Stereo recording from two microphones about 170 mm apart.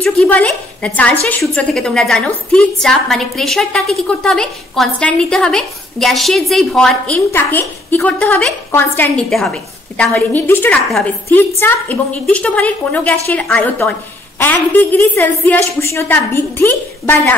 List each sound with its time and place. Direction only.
0.0 s a woman's voice: 5° left (ahead or behind)